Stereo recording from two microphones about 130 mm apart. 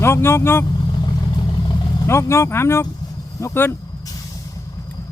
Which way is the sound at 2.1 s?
20° left (ahead or behind).